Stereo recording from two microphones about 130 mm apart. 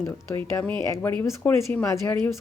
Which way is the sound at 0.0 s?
15° left (ahead or behind).